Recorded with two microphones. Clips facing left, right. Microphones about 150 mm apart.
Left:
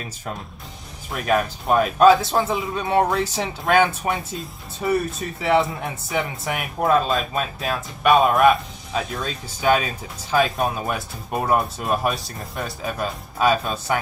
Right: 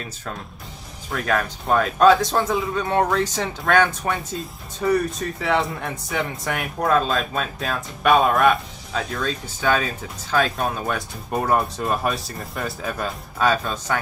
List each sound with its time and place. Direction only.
1.1 s a man's voice: 15° left (ahead or behind)
9.2 s a man's voice: 15° left (ahead or behind)
13.5 s a man's voice: 15° left (ahead or behind)